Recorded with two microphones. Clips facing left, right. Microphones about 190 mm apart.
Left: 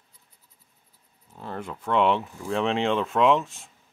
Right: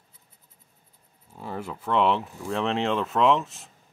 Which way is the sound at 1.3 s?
5° right (ahead or behind).